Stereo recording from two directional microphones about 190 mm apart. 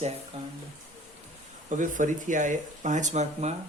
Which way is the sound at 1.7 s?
40° right (ahead or behind).